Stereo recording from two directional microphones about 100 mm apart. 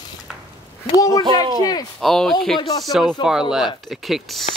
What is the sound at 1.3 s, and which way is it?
Speech, 40° left (ahead or behind).